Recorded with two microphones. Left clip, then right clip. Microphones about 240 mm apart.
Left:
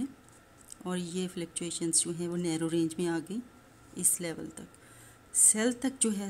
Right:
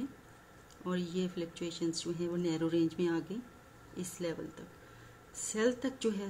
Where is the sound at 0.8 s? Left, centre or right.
Left.